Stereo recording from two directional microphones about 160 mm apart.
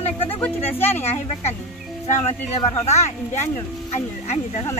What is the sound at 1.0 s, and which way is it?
Speech, 40° left (ahead or behind).